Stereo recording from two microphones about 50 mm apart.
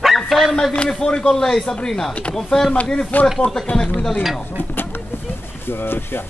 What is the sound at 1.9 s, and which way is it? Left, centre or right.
Speech, centre.